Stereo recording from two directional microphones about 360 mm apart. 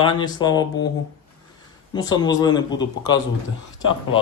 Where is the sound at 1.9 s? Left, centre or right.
Centre.